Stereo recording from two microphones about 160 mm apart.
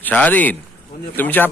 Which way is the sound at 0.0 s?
10° left (ahead or behind).